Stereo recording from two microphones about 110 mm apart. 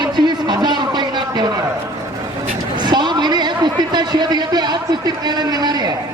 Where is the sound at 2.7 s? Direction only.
40° right (ahead or behind).